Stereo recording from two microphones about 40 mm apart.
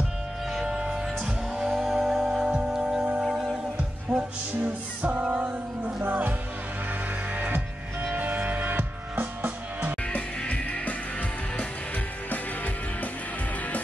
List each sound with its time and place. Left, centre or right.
0.7 s music: centre
3.7 s music: right
4.6 s music: right
5.1 s music: right
5.4 s music: right
6.0 s music: right
8.2 s music: right
10.0 s music: left